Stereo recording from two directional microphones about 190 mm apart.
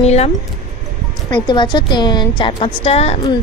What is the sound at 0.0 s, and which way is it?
Speech, 35° left (ahead or behind).